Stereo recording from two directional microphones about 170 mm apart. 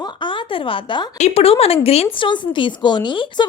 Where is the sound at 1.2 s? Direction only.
40° left (ahead or behind).